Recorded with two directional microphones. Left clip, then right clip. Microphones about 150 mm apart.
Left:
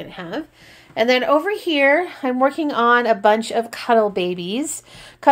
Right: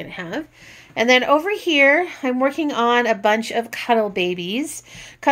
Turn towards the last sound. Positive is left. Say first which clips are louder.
# left 4 dB
turn(degrees=5)  # may be behind; listen again after turning